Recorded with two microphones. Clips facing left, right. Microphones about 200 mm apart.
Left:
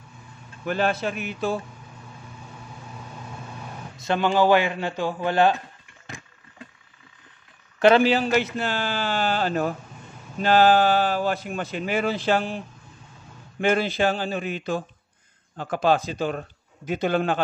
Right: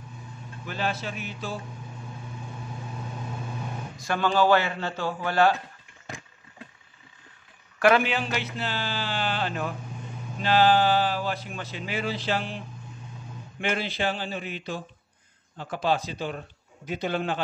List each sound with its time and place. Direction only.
0.7 s speech: 55° left (ahead or behind)
4.0 s speech: 20° left (ahead or behind)
7.8 s speech: 30° left (ahead or behind); by 12.5 s 50° left (ahead or behind)
13.6 s speech: 45° left (ahead or behind)